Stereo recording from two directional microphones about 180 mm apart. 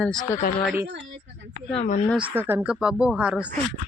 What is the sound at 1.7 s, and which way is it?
Speech, 40° left (ahead or behind).